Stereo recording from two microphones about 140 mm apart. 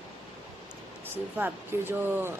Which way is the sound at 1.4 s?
15° right (ahead or behind).